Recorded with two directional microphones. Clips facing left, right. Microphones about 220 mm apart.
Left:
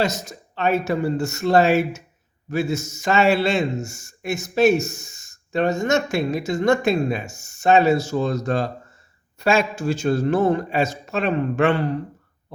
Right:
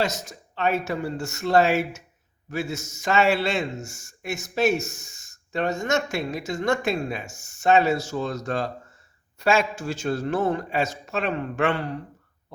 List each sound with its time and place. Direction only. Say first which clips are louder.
0.0 s a man's voice: left 3 dB; 35° left (ahead or behind)